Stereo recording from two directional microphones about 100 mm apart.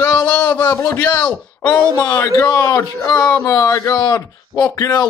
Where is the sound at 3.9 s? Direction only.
40° left (ahead or behind).